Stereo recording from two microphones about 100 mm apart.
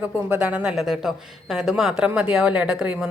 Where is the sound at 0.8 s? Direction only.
Centre (ahead or behind).